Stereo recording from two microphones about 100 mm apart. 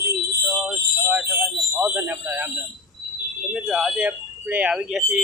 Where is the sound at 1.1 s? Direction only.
15° right (ahead or behind).